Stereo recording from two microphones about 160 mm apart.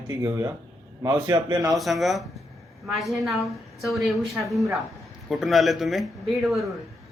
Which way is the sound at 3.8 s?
Centre (ahead or behind).